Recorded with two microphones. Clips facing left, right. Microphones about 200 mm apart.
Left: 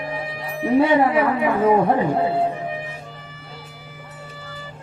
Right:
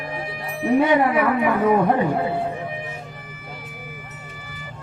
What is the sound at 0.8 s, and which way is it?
Speech, 25° left (ahead or behind).